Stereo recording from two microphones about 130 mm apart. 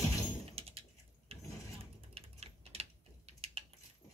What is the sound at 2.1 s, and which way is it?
Typing, 50° right (ahead or behind).